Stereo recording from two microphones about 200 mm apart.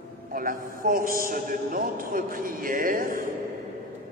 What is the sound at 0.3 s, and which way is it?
A man's voice, 45° right (ahead or behind).